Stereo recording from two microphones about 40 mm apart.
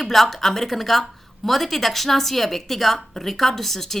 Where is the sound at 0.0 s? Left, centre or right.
Centre.